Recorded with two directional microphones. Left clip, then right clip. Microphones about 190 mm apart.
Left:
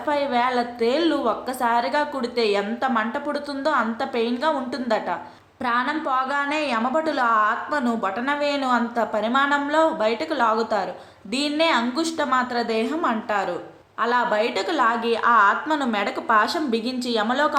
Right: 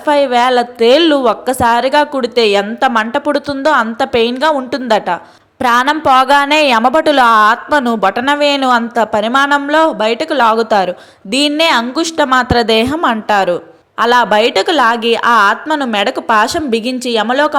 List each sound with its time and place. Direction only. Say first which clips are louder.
0.0 s a woman's voice: right 11 dB; 40° right (ahead or behind)